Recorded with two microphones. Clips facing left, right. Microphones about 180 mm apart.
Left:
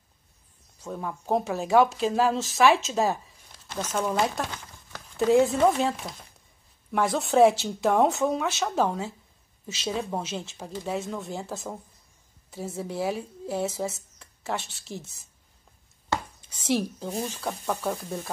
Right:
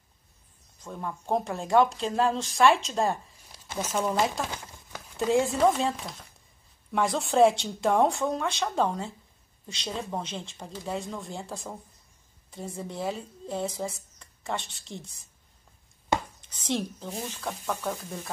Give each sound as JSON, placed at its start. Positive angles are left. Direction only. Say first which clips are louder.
{"t": 0.7, "sound": "speech", "louder": "left 2 dB", "side_deg": 5}
{"t": 3.5, "sound": "speech", "louder": "even", "side_deg": -10}
{"t": 16.1, "sound": "a sound", "louder": "right 2 dB", "side_deg": -15}
{"t": 16.4, "sound": "a woman's voice", "louder": "left 5 dB", "side_deg": 10}